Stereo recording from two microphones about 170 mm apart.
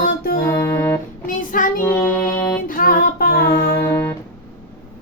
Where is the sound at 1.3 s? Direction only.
50° left (ahead or behind).